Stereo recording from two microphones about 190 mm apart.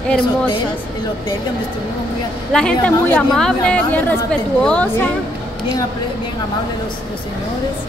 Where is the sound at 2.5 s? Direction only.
5° left (ahead or behind).